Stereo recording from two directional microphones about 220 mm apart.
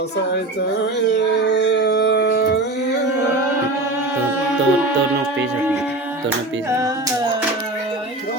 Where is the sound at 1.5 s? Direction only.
50° left (ahead or behind).